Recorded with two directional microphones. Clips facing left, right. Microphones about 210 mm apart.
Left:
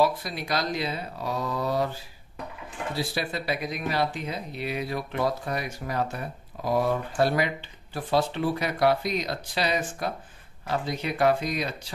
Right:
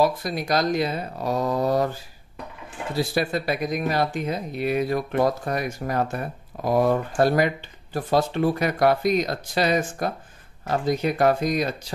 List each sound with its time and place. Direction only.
0.0 s speech: 45° right (ahead or behind)
3.0 s speech: 45° right (ahead or behind)